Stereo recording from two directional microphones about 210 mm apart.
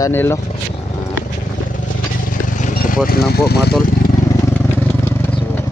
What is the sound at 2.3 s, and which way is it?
Vehicle, 40° left (ahead or behind).